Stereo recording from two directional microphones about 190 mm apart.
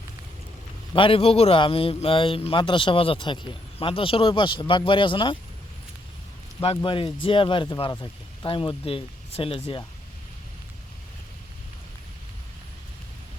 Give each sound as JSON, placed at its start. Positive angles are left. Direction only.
{"t": 0.9, "sound": "a man's voice", "side_deg": 30}
{"t": 6.6, "sound": "a man's voice", "side_deg": 30}